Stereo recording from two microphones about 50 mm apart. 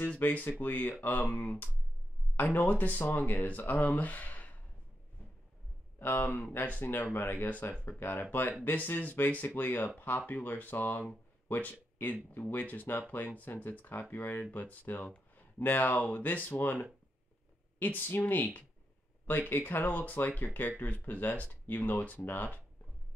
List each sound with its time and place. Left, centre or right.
0.2 s speech: left
2.5 s speech: left
5.9 s speech: left
7.2 s speech: left
8.0 s speech: left
17.7 s speech: left